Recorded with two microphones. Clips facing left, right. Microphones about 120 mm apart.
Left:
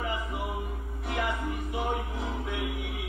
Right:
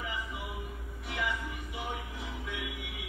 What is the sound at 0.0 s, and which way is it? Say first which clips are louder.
Music: left 6 dB; 50° left (ahead or behind).